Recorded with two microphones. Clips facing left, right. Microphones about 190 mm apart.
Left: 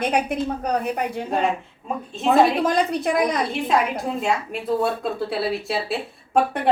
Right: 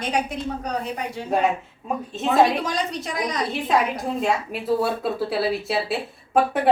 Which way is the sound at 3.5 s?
Centre (ahead or behind).